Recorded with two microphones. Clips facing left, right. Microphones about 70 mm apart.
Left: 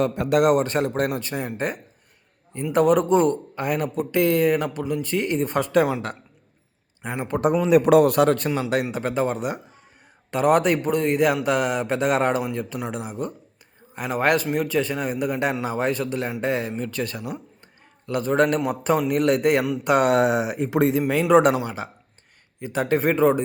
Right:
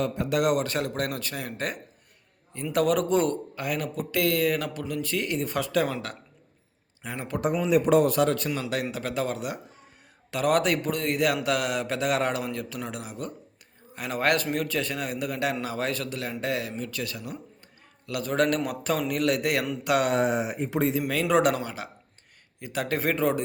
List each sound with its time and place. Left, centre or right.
0.0 s a man's voice: left
0.5 s a man's voice: left
4.8 s speech: centre
5.0 s speech: left
7.2 s speech: left
7.4 s a man's voice: left
8.9 s a man's voice: left
18.0 s a man's voice: left
18.4 s speech: centre
18.7 s a man's voice: left
20.1 s speech: left
20.7 s a man's voice: left
21.0 s a man's voice: left